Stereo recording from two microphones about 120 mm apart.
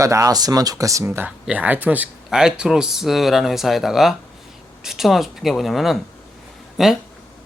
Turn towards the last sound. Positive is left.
turn(degrees=0)  # may be behind; listen again after turning